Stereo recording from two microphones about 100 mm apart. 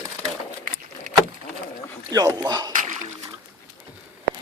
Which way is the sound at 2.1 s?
40° right (ahead or behind).